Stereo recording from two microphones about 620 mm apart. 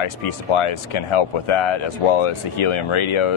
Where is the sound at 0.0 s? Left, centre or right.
Left.